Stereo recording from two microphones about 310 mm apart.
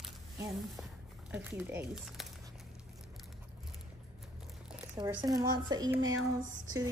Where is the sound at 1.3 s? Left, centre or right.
Centre.